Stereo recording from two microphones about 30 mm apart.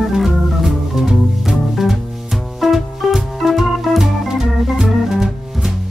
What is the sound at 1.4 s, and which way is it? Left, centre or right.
Music, centre.